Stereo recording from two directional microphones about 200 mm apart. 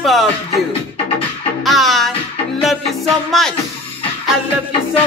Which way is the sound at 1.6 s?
Centre (ahead or behind).